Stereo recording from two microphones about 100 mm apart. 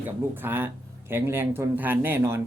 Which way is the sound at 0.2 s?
20° right (ahead or behind).